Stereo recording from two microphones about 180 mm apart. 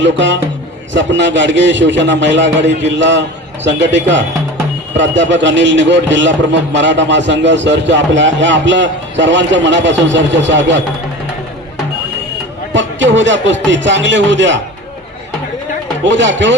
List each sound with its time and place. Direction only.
0.0 s a man's voice: 85° right
12.7 s a man's voice: 90° right
16.0 s a man's voice: 90° right